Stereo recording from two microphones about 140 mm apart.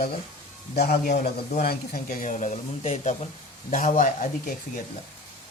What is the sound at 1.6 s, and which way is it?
Speech, 90° left.